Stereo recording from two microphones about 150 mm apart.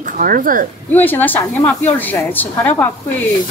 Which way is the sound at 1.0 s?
10° left (ahead or behind).